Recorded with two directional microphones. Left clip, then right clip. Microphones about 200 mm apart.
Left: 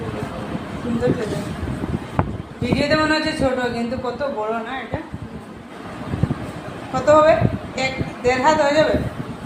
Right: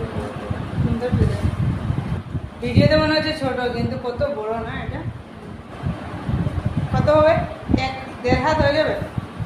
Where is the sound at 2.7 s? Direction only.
15° left (ahead or behind).